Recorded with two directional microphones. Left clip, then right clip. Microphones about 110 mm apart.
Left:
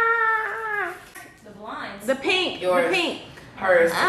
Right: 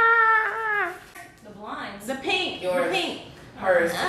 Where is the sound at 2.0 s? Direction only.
15° left (ahead or behind).